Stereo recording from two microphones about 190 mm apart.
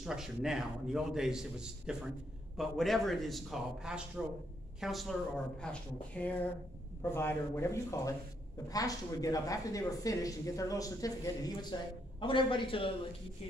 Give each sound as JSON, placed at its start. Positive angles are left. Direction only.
{"t": 0.0, "sound": "a man's voice", "side_deg": 0}